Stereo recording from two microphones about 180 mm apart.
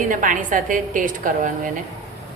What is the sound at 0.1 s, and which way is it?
A woman's voice, 45° right (ahead or behind).